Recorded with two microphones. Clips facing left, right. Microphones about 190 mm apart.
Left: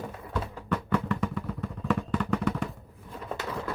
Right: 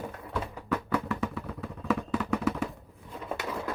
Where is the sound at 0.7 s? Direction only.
5° right (ahead or behind).